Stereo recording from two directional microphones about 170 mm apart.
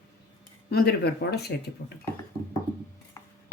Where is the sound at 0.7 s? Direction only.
70° left (ahead or behind).